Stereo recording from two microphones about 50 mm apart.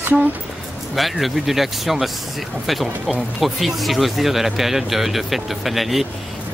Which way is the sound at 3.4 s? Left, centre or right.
Centre.